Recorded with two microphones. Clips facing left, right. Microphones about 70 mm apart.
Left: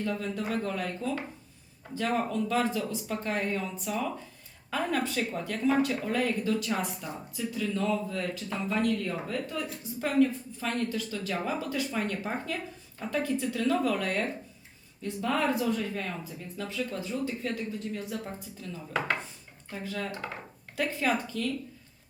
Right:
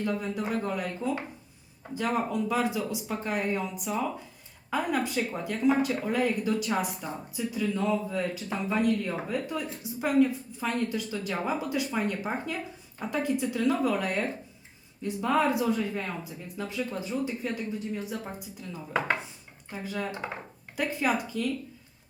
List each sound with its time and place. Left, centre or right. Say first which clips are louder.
0.0 s speech: right 2 dB; centre